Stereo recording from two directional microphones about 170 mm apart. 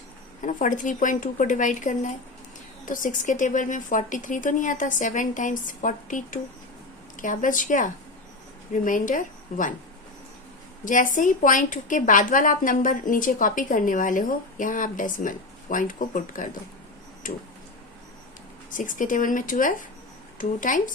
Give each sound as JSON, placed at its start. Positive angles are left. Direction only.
{"t": 0.4, "sound": "a woman's voice", "side_deg": 50}
{"t": 10.8, "sound": "a woman's voice", "side_deg": 50}
{"t": 18.7, "sound": "a woman's voice", "side_deg": 50}